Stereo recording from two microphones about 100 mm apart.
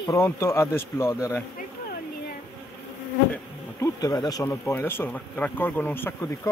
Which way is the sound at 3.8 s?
40° left (ahead or behind).